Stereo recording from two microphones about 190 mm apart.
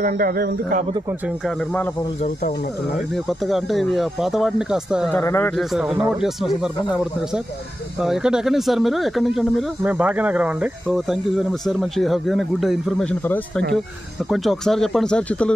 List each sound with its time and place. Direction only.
0.0 s speech: 50° right (ahead or behind)
3.3 s speech: centre (ahead or behind)
5.1 s speech: 10° left (ahead or behind)
5.6 s speech: centre (ahead or behind)
8.0 s speech: 5° right (ahead or behind)
14.3 s speech: centre (ahead or behind)